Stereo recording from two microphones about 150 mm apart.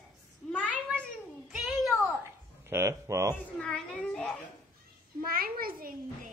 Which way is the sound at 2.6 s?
20° right (ahead or behind).